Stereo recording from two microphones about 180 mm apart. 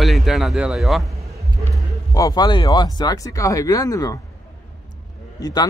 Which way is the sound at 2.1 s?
20° left (ahead or behind).